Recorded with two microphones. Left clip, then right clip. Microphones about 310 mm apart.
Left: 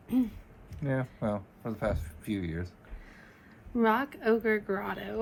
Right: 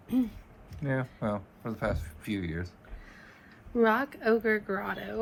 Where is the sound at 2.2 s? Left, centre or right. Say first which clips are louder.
Even; right.